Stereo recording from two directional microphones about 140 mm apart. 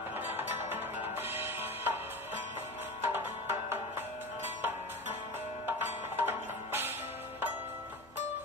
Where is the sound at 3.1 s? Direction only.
15° right (ahead or behind).